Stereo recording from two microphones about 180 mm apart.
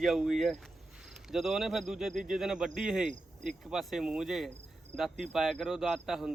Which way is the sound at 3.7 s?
Centre (ahead or behind).